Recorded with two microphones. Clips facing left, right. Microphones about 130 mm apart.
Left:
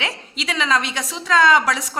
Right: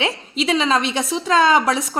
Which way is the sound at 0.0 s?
25° right (ahead or behind).